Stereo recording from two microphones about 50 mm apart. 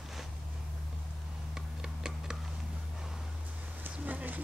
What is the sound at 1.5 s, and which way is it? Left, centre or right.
Tick-tock, centre.